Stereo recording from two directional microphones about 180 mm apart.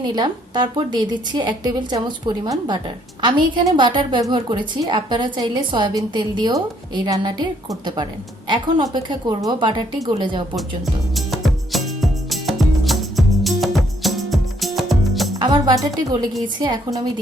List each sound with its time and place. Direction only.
0.2 s a woman's voice: 25° right (ahead or behind)
11.1 s music: centre (ahead or behind)
15.4 s a woman's voice: 25° right (ahead or behind)